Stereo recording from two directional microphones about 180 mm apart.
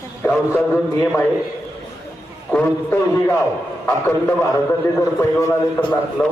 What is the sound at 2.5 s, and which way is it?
Speech, 10° left (ahead or behind).